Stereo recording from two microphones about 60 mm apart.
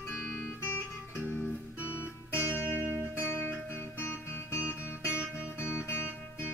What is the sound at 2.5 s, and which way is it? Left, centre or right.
Music, left.